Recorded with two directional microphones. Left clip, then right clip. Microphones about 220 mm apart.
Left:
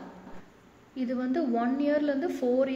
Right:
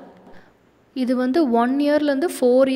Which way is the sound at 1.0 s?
50° right (ahead or behind).